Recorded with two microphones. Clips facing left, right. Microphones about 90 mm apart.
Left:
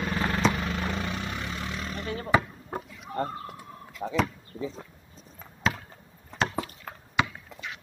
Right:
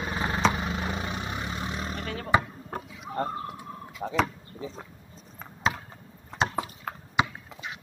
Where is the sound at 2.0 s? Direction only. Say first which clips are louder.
Left 1 dB; 45° right (ahead or behind).